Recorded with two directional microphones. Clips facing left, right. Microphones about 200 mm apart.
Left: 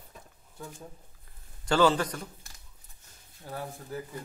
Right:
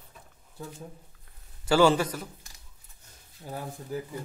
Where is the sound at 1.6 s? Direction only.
10° right (ahead or behind).